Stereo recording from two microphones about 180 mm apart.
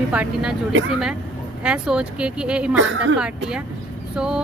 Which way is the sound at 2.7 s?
90° right.